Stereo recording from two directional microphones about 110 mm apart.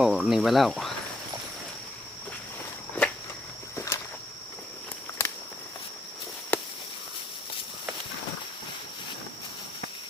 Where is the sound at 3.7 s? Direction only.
25° left (ahead or behind).